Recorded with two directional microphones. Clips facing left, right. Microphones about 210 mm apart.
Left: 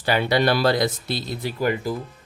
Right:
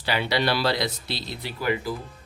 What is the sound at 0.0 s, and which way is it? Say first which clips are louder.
Speech: left 5 dB; 50° left (ahead or behind).